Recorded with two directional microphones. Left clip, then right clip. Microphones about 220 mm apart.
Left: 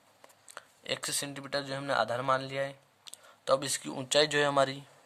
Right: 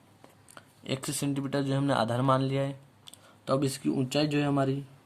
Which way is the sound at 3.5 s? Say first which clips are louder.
Right 1 dB; 30° left (ahead or behind).